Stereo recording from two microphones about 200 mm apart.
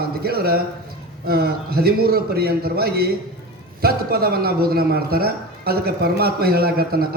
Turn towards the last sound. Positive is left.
turn(degrees=-50)  # may be behind; listen again after turning